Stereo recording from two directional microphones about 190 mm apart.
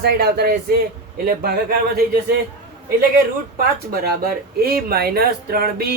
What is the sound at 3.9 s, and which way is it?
Speech, 55° right (ahead or behind).